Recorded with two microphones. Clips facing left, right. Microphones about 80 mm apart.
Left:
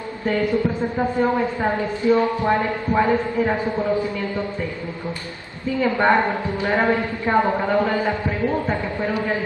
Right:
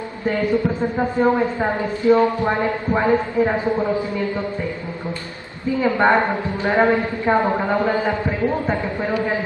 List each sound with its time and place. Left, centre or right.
0.3 s speech: right
5.8 s speech: centre